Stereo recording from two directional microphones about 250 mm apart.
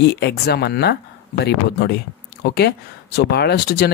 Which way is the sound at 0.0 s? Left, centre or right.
Left.